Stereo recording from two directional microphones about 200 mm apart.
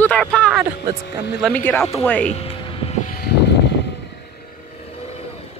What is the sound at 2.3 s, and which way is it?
Music, 30° left (ahead or behind).